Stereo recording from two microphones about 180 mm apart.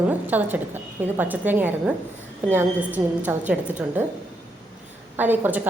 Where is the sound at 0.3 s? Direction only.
10° right (ahead or behind).